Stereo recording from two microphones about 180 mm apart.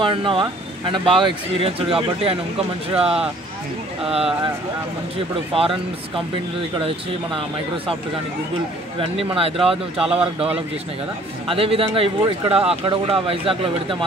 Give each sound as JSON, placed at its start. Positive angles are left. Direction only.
{"t": 0.0, "sound": "speech", "side_deg": -25}
{"t": 5.5, "sound": "speech", "side_deg": -30}
{"t": 6.8, "sound": "speech", "side_deg": -30}
{"t": 9.0, "sound": "speech", "side_deg": -30}
{"t": 9.9, "sound": "speech", "side_deg": -5}
{"t": 11.4, "sound": "speech", "side_deg": -30}